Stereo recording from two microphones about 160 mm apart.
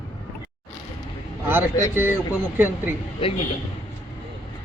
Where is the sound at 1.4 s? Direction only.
15° right (ahead or behind).